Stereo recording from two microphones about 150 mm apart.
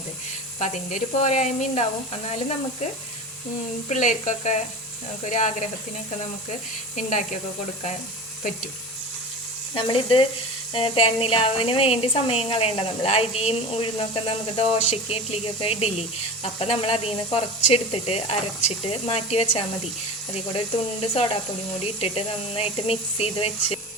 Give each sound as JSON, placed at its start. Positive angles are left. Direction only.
{"t": 0.6, "sound": "speech", "side_deg": 55}
{"t": 3.8, "sound": "speech", "side_deg": 55}
{"t": 6.9, "sound": "speech", "side_deg": 55}
{"t": 9.7, "sound": "a woman's voice", "side_deg": 35}
{"t": 21.0, "sound": "a woman's voice", "side_deg": 45}